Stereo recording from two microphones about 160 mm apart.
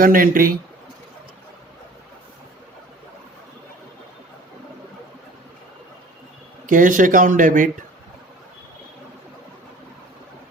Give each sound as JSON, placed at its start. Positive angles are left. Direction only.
{"t": 0.0, "sound": "speech", "side_deg": -60}
{"t": 6.7, "sound": "speech", "side_deg": -55}